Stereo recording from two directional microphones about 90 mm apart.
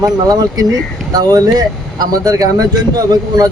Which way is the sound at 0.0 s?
45° right (ahead or behind).